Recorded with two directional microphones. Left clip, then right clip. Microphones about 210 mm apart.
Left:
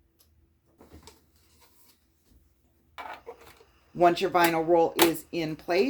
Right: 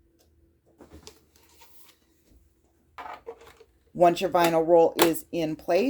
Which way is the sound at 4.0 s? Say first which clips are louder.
Right 1 dB; 50° right (ahead or behind).